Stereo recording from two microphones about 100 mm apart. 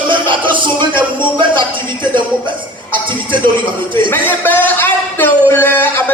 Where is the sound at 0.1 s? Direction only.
55° right (ahead or behind).